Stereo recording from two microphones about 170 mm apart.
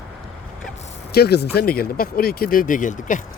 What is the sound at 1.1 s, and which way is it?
Speech, 70° left (ahead or behind).